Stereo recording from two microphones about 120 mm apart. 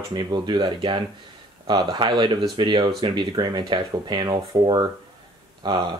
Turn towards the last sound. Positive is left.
turn(degrees=-40)  # may be behind; listen again after turning